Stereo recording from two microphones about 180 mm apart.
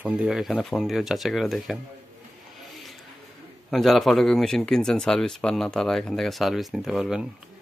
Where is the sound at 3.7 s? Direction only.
Centre (ahead or behind).